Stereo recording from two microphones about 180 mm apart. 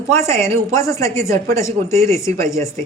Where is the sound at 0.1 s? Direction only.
15° left (ahead or behind).